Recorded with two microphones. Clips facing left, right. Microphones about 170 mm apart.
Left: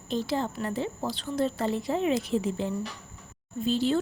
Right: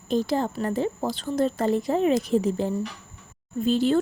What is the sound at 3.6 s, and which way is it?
Speech, 55° right (ahead or behind).